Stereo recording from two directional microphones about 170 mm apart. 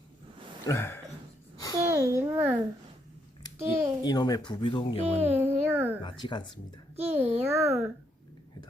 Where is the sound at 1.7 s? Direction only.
20° right (ahead or behind).